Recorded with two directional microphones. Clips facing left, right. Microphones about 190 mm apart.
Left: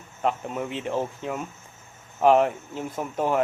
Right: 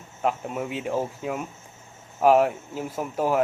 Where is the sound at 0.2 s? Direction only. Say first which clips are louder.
Even; 5° right (ahead or behind).